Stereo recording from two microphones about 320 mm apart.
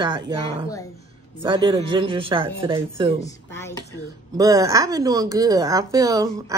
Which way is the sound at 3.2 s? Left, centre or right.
Centre.